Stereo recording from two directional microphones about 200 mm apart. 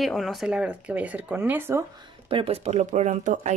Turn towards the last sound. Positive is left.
turn(degrees=-35)  # may be behind; listen again after turning